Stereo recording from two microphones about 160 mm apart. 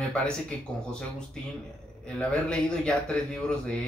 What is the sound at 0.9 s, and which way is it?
Speech, 5° left (ahead or behind).